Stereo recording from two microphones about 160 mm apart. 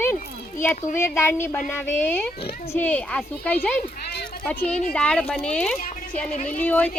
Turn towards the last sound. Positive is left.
turn(degrees=10)  # may be behind; listen again after turning